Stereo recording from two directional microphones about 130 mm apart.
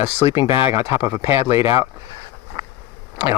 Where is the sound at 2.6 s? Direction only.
35° right (ahead or behind).